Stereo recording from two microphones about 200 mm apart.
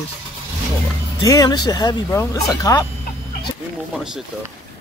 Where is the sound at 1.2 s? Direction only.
15° left (ahead or behind).